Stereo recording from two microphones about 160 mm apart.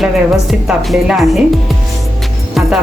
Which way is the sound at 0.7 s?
Centre (ahead or behind).